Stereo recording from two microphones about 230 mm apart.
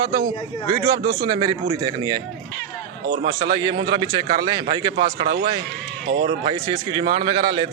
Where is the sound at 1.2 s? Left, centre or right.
Right.